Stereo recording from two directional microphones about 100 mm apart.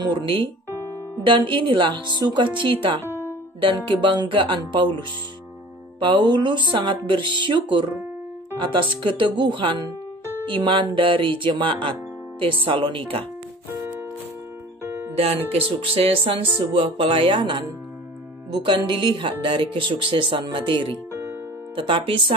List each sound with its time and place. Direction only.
0.0 s speech: 50° right (ahead or behind)
3.1 s music: 20° right (ahead or behind)
3.6 s speech: 55° right (ahead or behind)
5.9 s speech: 55° right (ahead or behind)
15.1 s speech: 70° right (ahead or behind)